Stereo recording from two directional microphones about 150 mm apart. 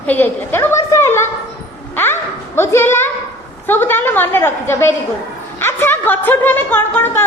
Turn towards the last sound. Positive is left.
turn(degrees=15)  # may be behind; listen again after turning